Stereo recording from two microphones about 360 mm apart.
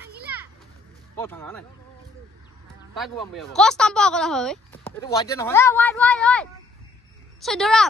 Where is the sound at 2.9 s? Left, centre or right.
Centre.